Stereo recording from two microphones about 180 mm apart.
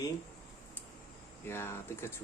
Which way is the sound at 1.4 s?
15° left (ahead or behind).